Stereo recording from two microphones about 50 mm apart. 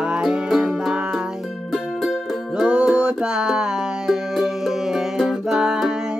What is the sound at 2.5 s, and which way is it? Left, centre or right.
Music, centre.